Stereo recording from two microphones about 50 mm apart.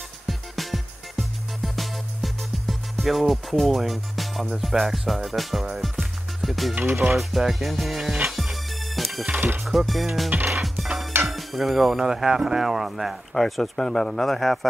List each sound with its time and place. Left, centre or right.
0.3 s music: centre
6.7 s music: right
7.2 s speech: centre
8.3 s music: centre
9.3 s music: right
9.7 s speech: centre
10.6 s music: centre
11.2 s speech: centre
13.3 s speech: centre